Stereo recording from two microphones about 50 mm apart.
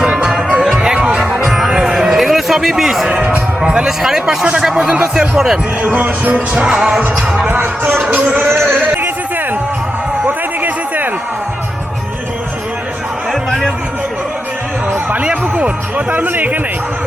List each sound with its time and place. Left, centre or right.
0.0 s music: centre
1.2 s music: centre
3.2 s speech: right
3.6 s speech: centre
5.3 s speech: centre
5.8 s speech: right
6.3 s music: right
7.6 s speech: right
8.2 s speech: right
10.6 s a sound: right
13.5 s a sound: centre
15.2 s music: right
16.3 s speech: right